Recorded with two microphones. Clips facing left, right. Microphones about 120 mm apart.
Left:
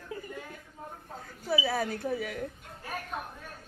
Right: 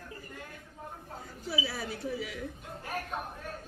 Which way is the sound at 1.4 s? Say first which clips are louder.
Left 6 dB; 55° left (ahead or behind).